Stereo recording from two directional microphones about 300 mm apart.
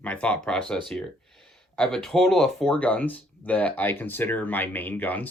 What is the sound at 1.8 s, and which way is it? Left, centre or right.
Speech, centre.